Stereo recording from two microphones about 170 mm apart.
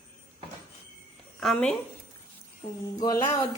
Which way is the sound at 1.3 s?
5° left (ahead or behind).